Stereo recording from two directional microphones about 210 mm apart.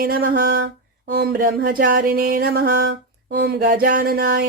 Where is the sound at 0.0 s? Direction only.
45° right (ahead or behind).